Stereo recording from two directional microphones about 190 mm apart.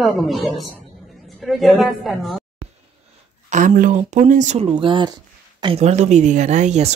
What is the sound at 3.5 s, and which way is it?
Speech, 40° right (ahead or behind).